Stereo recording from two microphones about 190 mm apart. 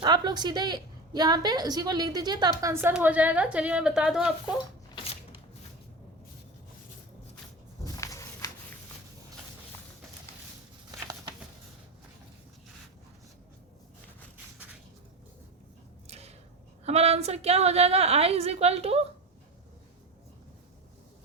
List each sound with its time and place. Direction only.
0.0 s a woman's voice: 25° right (ahead or behind); by 4.5 s 5° right (ahead or behind)
7.9 s walk: 15° left (ahead or behind)
16.0 s a sound: 35° right (ahead or behind)
16.8 s a woman's voice: 35° right (ahead or behind)